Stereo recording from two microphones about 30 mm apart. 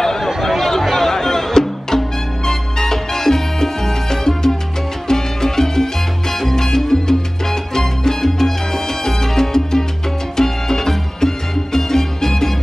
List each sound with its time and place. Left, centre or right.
0.4 s a sound: centre
0.8 s music: centre
2.4 s salsa music: centre
5.0 s music: centre
6.4 s salsa music: centre
10.3 s music: centre